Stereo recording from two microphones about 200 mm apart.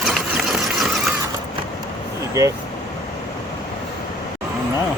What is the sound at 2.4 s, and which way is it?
Speech, 15° right (ahead or behind).